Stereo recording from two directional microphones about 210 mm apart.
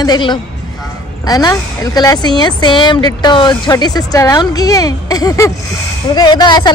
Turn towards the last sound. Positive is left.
turn(degrees=20)  # may be behind; listen again after turning